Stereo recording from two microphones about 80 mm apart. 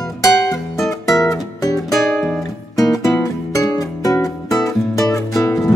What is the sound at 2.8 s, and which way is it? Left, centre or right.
Music, left.